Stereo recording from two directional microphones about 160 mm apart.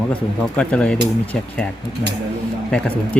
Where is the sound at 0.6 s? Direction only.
5° left (ahead or behind).